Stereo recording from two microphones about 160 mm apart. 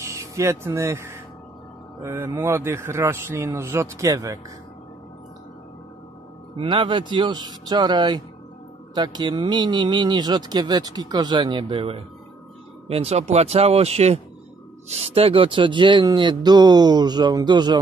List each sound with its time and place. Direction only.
0.0 s a man's voice: 20° right (ahead or behind)
6.5 s speech: 30° right (ahead or behind)